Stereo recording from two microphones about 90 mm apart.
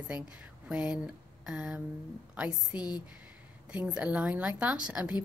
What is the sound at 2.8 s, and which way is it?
Speech, 50° left (ahead or behind).